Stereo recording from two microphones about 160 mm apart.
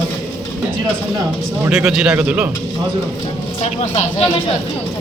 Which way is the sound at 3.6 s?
45° left (ahead or behind).